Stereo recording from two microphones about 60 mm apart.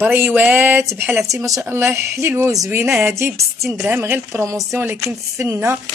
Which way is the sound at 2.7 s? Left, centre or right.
Right.